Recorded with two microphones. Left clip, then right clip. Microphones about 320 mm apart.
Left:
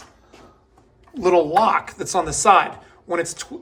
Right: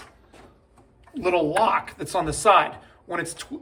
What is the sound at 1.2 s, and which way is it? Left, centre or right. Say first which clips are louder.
Speech: left 5 dB; centre.